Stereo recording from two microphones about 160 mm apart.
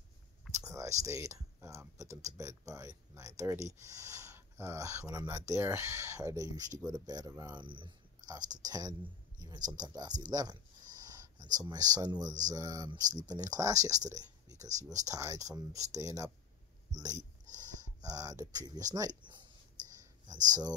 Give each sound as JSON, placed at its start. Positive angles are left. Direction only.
{"t": 0.6, "sound": "speech", "side_deg": -20}
{"t": 10.3, "sound": "a sound", "side_deg": -25}
{"t": 11.5, "sound": "speech", "side_deg": -25}